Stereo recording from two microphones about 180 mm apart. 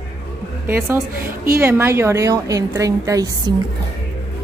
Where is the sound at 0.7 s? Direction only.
15° right (ahead or behind).